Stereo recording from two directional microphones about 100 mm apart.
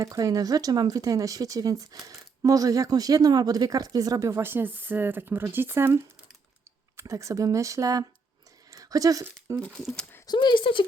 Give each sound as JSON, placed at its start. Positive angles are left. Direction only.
{"t": 0.0, "sound": "speech", "side_deg": -35}
{"t": 8.7, "sound": "a sound", "side_deg": -35}
{"t": 9.2, "sound": "speech", "side_deg": -30}
{"t": 9.6, "sound": "speech", "side_deg": 5}
{"t": 10.2, "sound": "speech", "side_deg": 50}